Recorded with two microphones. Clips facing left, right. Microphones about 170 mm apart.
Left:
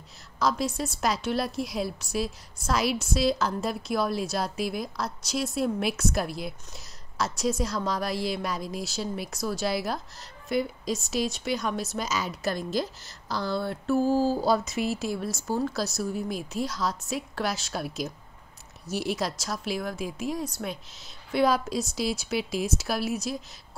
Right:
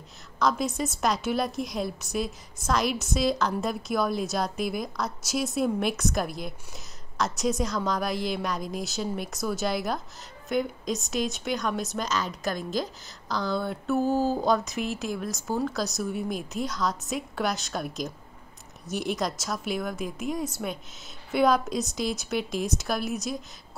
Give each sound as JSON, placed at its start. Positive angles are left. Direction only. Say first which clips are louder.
{"t": 0.4, "sound": "a woman's voice", "louder": "right 1 dB", "side_deg": 0}
{"t": 13.9, "sound": "a sound", "louder": "left 1 dB", "side_deg": -20}
{"t": 14.3, "sound": "a woman's voice", "louder": "even", "side_deg": 5}